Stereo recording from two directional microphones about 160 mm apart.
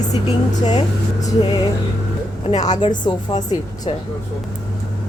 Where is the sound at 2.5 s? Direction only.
45° left (ahead or behind).